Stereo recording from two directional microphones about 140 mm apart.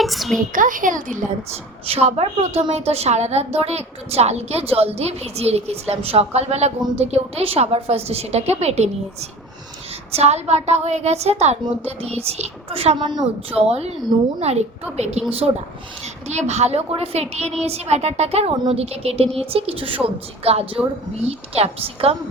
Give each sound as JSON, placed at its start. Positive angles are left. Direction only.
{"t": 0.0, "sound": "a woman's voice", "side_deg": 0}
{"t": 0.5, "sound": "speech", "side_deg": -70}
{"t": 1.9, "sound": "a woman's voice", "side_deg": -50}
{"t": 10.1, "sound": "a woman's voice", "side_deg": -50}